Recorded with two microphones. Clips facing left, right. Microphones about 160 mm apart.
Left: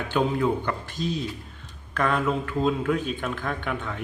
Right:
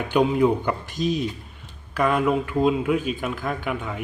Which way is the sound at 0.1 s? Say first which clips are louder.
Right 5 dB; 15° right (ahead or behind).